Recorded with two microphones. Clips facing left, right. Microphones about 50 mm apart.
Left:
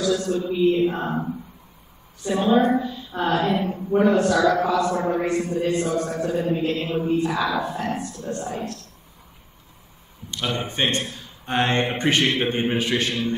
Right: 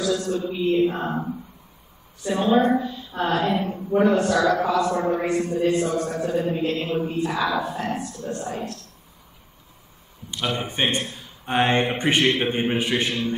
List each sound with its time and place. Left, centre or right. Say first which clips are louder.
0.0 s a man's voice: left 1 dB; centre
10.3 s speech: even; centre
11.8 s a man's voice: even; centre